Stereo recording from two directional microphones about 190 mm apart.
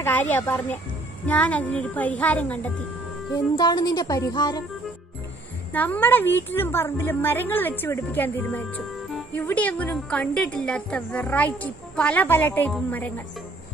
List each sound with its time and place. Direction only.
0.0 s a woman's voice: 10° left (ahead or behind)
3.5 s speech: 20° left (ahead or behind)
5.7 s a woman's voice: 10° left (ahead or behind)